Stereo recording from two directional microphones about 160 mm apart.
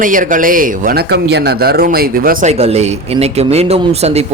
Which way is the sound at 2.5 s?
40° right (ahead or behind).